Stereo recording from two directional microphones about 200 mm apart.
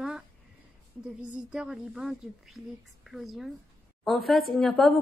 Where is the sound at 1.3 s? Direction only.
5° right (ahead or behind).